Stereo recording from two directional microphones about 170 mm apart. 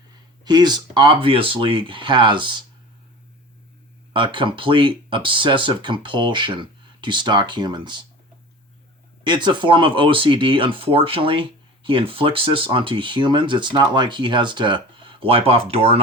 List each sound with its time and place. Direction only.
0.4 s speech: 25° right (ahead or behind)
4.1 s speech: 30° right (ahead or behind)
9.2 s speech: 25° right (ahead or behind)